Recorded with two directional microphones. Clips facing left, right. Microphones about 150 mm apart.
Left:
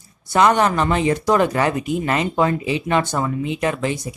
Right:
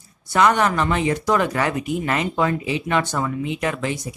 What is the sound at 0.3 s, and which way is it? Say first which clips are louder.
Speech: left 2 dB; 25° left (ahead or behind).